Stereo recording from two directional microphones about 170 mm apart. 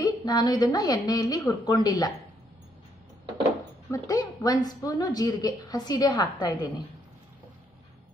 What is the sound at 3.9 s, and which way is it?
A woman's voice, 20° left (ahead or behind).